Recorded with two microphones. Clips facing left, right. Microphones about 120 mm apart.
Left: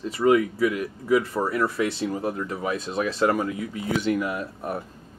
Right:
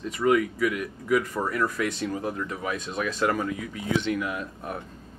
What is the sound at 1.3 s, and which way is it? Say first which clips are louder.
Speech: left 3 dB; 5° left (ahead or behind).